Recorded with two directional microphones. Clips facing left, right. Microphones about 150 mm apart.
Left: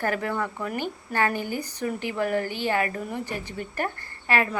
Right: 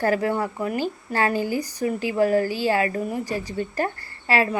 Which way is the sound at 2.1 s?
30° right (ahead or behind).